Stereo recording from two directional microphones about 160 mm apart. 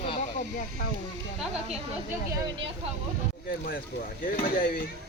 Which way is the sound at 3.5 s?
65° left (ahead or behind).